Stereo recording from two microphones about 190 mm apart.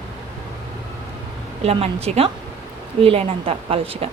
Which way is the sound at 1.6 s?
30° right (ahead or behind).